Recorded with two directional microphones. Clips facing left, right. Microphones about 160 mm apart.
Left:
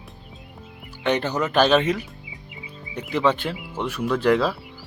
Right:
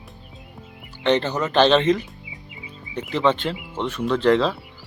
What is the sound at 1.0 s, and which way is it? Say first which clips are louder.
Speech: right 2 dB; 10° left (ahead or behind).